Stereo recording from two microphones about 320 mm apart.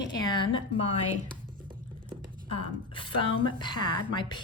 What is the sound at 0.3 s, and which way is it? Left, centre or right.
Speech, centre.